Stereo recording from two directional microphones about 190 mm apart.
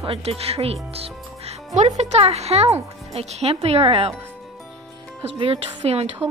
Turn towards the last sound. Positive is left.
turn(degrees=-30)  # may be behind; listen again after turning